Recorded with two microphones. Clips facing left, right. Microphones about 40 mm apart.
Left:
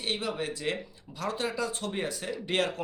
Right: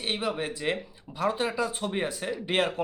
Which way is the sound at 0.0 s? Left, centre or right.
Centre.